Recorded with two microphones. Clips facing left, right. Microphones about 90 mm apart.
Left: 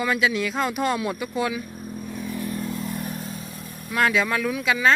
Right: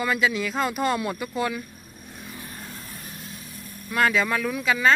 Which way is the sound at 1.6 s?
90° left.